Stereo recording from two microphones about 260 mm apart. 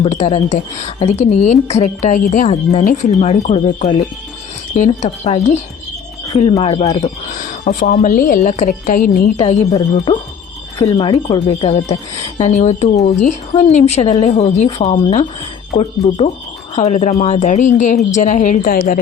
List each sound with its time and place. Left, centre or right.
0.0 s a woman's voice: left
9.4 s a woman's voice: left